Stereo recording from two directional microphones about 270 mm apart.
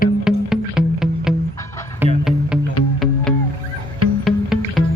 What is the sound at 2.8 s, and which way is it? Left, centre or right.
Music, left.